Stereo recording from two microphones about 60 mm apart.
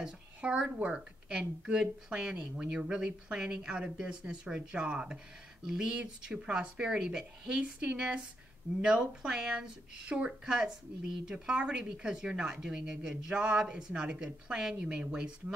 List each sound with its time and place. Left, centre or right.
0.0 s speech: centre